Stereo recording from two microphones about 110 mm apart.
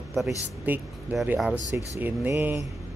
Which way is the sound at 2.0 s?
20° right (ahead or behind).